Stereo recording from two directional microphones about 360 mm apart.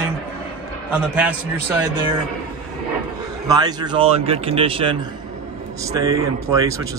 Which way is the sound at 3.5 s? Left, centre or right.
Centre.